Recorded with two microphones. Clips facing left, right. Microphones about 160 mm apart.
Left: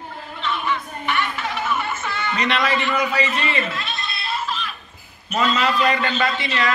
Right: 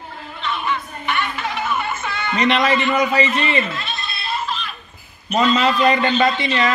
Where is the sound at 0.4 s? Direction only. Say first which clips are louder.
Right 1 dB; centre (ahead or behind).